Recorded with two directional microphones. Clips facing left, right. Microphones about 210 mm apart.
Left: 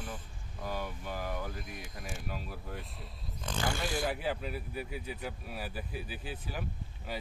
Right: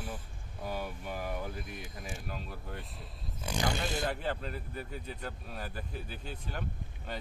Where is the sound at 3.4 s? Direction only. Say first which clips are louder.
Right 1 dB; 15° right (ahead or behind).